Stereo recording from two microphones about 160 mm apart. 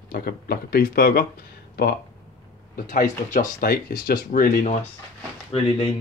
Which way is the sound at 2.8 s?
55° left (ahead or behind).